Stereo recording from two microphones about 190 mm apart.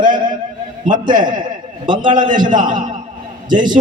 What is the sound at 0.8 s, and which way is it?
Speech, 45° right (ahead or behind).